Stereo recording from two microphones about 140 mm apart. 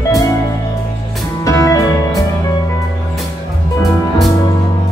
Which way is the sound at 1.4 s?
25° left (ahead or behind).